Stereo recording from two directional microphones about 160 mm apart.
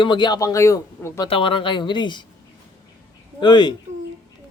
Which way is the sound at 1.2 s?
35° left (ahead or behind).